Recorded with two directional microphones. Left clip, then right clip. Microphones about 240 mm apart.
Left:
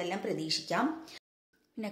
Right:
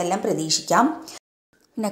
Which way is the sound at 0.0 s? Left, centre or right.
Centre.